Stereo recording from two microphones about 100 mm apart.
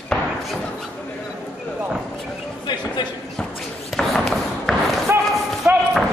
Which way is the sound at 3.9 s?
Centre (ahead or behind).